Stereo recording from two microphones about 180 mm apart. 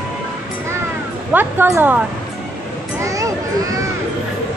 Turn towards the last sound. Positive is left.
turn(degrees=-20)  # may be behind; listen again after turning